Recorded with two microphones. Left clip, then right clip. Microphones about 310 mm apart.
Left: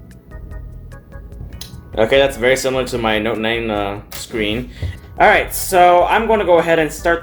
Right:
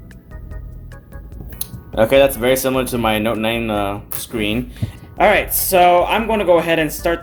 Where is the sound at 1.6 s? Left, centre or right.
Right.